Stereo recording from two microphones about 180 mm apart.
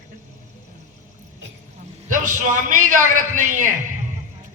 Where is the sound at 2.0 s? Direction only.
45° right (ahead or behind).